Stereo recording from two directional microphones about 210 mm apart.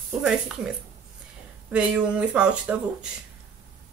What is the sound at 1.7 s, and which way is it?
Speech, 5° right (ahead or behind).